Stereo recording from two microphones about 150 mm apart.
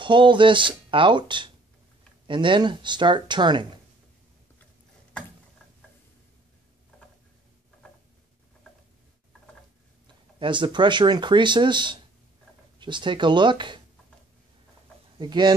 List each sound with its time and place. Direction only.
0.0 s speech: 35° right (ahead or behind)
10.4 s speech: 30° right (ahead or behind)
15.1 s speech: 30° right (ahead or behind)